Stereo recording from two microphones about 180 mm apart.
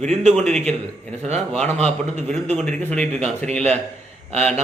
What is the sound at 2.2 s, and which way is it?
A man's voice, 5° left (ahead or behind).